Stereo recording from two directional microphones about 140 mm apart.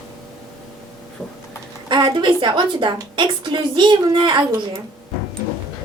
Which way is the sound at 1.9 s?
35° right (ahead or behind).